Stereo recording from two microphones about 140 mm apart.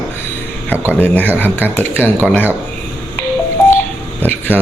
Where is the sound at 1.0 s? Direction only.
15° left (ahead or behind).